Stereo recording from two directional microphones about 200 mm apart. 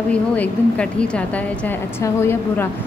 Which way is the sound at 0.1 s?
5° left (ahead or behind).